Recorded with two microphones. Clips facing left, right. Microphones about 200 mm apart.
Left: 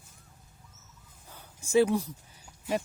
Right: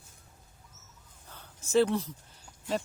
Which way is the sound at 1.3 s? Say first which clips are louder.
Left 1 dB; 10° left (ahead or behind).